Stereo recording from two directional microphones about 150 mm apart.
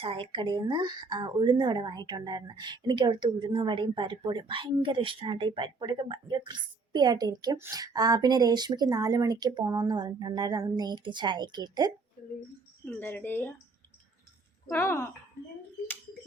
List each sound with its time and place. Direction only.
0.0 s a woman's voice: 35° right (ahead or behind)
12.8 s speech: 15° left (ahead or behind)
14.7 s speech: 15° left (ahead or behind)